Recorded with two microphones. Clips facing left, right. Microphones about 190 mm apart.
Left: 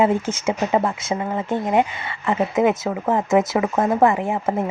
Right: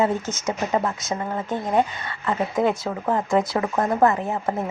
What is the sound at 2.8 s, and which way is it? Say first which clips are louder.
Speech: left 3 dB; 20° left (ahead or behind).